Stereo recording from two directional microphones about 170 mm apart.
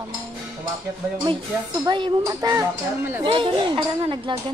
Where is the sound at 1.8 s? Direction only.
25° right (ahead or behind).